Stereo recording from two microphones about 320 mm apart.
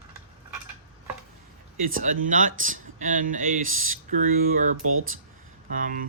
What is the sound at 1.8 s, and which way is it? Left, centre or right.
Speech, right.